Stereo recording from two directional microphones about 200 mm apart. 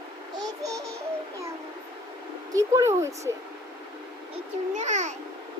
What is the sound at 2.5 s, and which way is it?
Speech, 15° right (ahead or behind).